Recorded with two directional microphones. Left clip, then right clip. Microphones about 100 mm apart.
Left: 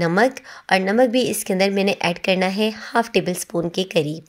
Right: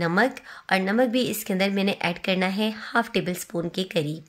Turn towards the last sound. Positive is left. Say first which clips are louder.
# left 6 dB
turn(degrees=45)  # may be behind; listen again after turning